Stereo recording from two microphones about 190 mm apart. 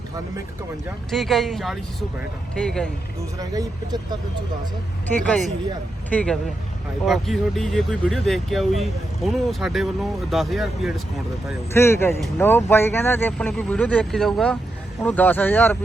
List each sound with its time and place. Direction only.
1.1 s speech: centre (ahead or behind)
3.3 s speech: 20° right (ahead or behind)
5.1 s speech: 5° left (ahead or behind)
11.7 s speech: 15° left (ahead or behind)